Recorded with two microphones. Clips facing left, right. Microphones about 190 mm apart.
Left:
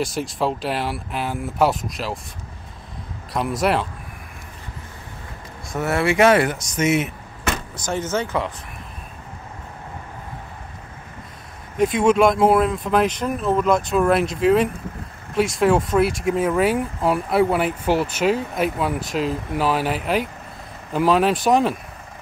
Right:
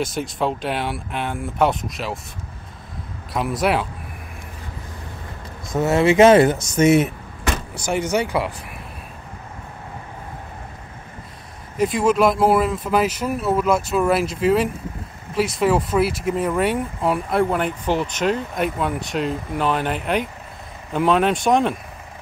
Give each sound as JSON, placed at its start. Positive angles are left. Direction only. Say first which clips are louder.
{"t": 0.0, "sound": "speech", "louder": "even", "side_deg": 0}
{"t": 3.3, "sound": "speech", "louder": "even", "side_deg": 0}
{"t": 5.7, "sound": "speech", "louder": "right 4 dB", "side_deg": -20}
{"t": 7.7, "sound": "speech", "louder": "right 4 dB", "side_deg": -10}
{"t": 11.7, "sound": "speech", "louder": "left 1 dB", "side_deg": 0}